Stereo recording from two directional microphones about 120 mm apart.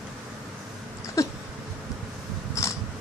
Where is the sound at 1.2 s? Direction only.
25° left (ahead or behind).